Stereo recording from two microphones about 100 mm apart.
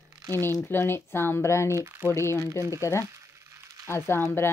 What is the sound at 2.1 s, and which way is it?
Speech, 30° left (ahead or behind).